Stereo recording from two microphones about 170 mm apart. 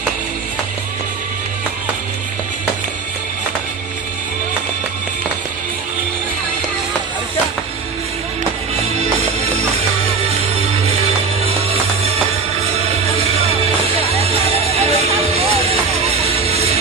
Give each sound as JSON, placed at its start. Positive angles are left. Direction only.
{"t": 13.8, "sound": "music", "side_deg": -35}